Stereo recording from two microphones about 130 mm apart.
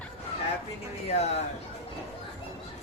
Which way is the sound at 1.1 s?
55° left (ahead or behind).